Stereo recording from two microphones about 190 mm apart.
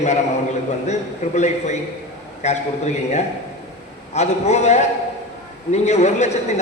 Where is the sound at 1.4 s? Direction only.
35° left (ahead or behind).